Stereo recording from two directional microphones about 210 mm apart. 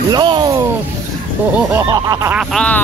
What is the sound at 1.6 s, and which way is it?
Snicker, 15° right (ahead or behind).